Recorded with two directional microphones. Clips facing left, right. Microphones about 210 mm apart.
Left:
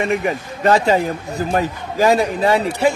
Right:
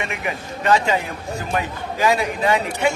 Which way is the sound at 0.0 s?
35° left (ahead or behind).